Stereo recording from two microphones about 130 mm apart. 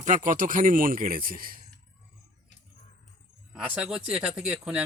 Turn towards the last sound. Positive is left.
turn(degrees=-5)  # may be behind; listen again after turning